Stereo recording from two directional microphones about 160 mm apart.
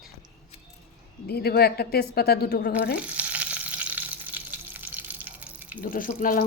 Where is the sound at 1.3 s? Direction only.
80° left.